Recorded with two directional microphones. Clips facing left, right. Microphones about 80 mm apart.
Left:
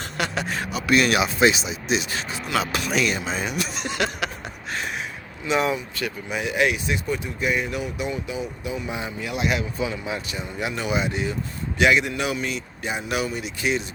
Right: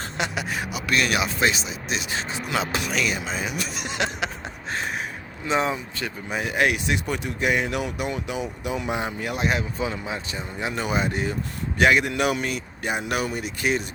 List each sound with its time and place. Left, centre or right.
0.3 s a man's voice: centre
0.9 s speech: centre
2.5 s a sound: right
2.9 s speech: centre
3.8 s a sound: right
5.5 s speech: right
6.8 s speech: right